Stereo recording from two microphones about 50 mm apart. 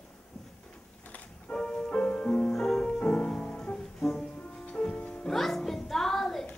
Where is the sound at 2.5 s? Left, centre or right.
Centre.